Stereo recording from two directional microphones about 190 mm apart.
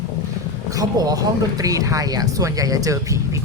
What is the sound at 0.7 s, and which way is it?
Speech, 20° right (ahead or behind).